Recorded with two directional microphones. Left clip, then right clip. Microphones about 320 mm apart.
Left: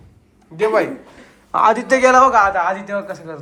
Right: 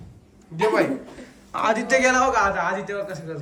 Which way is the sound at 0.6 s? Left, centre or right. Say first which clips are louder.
Left 4 dB; centre.